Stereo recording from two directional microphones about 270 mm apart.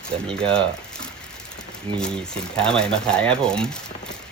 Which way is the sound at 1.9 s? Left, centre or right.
Centre.